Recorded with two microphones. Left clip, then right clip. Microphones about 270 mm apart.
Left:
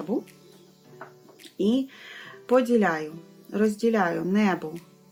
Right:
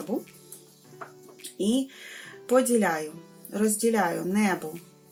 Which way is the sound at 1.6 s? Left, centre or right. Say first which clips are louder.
Left 2 dB; left.